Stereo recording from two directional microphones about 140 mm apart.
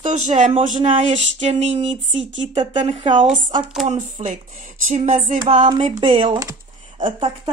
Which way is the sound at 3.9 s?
55° right (ahead or behind).